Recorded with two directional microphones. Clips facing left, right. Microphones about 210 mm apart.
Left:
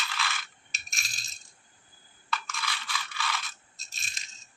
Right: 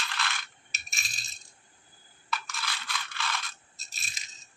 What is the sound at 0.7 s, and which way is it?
Coin, centre (ahead or behind).